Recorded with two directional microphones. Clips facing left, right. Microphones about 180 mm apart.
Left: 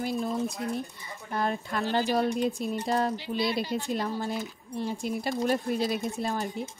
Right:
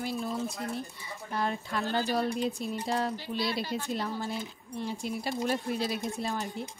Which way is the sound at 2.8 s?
45° left (ahead or behind).